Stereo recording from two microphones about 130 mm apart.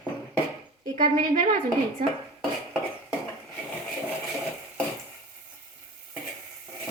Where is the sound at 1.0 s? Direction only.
90° right.